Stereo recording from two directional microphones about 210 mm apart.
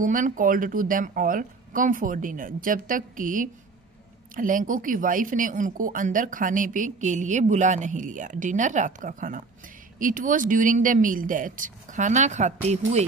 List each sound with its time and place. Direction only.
0.0 s speech: 40° right (ahead or behind)